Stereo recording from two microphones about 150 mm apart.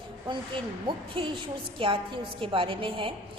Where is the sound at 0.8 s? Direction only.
35° right (ahead or behind).